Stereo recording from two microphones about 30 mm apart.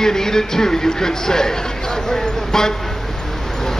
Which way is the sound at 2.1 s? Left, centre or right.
Centre.